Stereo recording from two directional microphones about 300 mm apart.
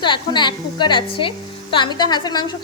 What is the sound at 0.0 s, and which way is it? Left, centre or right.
Speech, centre.